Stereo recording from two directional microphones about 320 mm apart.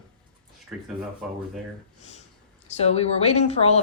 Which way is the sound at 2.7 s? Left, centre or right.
Centre.